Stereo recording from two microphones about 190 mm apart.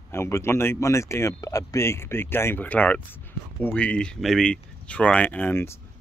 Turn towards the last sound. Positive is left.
turn(degrees=10)  # may be behind; listen again after turning